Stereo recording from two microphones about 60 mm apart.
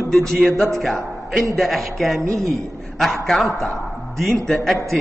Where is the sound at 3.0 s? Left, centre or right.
Centre.